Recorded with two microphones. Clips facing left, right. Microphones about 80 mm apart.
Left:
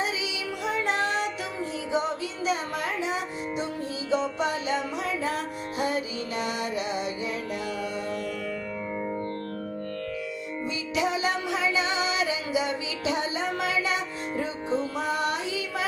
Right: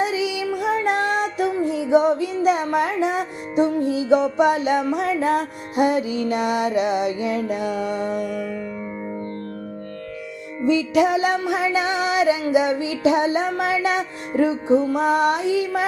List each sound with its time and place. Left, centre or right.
0.0 s music: right
8.0 s music: centre
10.7 s music: right
14.9 s child singing: right